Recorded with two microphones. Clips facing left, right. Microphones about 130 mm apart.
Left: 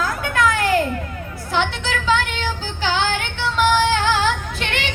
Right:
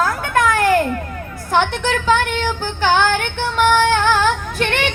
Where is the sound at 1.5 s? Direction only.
50° right (ahead or behind).